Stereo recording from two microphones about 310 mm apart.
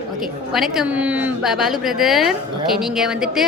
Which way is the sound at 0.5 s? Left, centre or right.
Centre.